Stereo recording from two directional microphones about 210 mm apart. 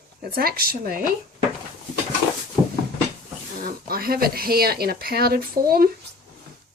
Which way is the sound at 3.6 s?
45° right (ahead or behind).